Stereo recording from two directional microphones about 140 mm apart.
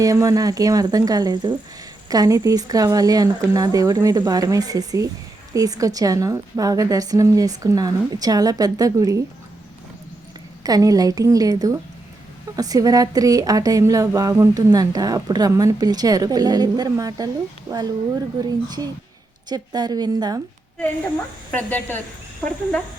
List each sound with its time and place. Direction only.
0.0 s speech: 25° right (ahead or behind)
10.6 s speech: 25° right (ahead or behind)
21.5 s speech: 10° left (ahead or behind)